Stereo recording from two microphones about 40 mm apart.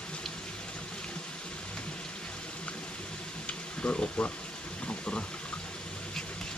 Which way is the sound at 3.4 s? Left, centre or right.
Left.